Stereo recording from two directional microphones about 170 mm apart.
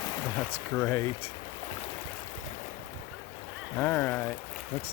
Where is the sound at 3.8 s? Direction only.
10° left (ahead or behind).